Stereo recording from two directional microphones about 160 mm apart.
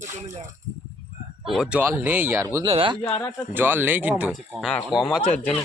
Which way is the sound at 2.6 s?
30° right (ahead or behind).